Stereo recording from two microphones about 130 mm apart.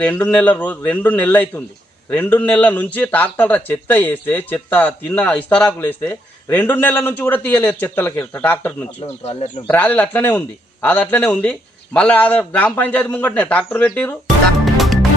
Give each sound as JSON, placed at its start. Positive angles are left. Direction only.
{"t": 0.0, "sound": "a man's voice", "side_deg": 15}
{"t": 14.6, "sound": "music", "side_deg": 0}